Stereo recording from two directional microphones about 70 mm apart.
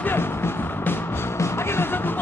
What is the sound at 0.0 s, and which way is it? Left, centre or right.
Music, left.